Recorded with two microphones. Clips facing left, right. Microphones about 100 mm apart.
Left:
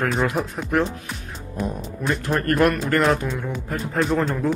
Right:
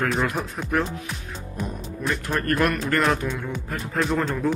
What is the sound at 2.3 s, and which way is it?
Speech, 30° left (ahead or behind).